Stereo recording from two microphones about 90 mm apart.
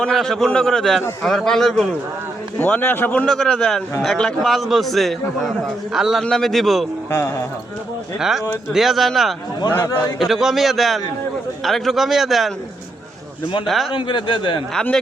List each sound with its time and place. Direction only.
0.0 s a man's voice: 5° left (ahead or behind)
2.6 s a man's voice: 15° left (ahead or behind); by 6.8 s centre (ahead or behind)
7.1 s speech: 30° left (ahead or behind)
8.2 s a man's voice: 5° right (ahead or behind)
13.9 s speech: 60° left (ahead or behind)
14.7 s a man's voice: 5° left (ahead or behind)